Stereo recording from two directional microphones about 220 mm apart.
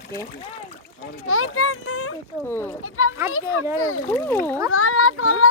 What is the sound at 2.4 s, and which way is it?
Speech, 10° left (ahead or behind).